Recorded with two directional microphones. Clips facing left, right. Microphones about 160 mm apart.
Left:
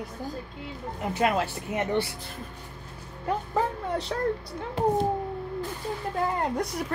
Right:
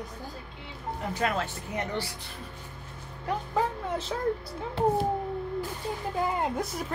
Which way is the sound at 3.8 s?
Centre (ahead or behind).